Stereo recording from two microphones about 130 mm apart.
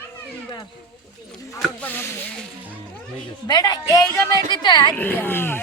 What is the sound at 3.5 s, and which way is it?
A woman's voice, 30° left (ahead or behind).